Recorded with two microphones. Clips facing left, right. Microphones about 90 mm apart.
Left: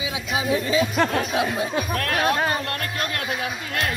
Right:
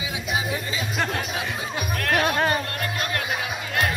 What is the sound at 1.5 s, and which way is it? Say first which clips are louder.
Speech: left 4 dB; 55° left (ahead or behind).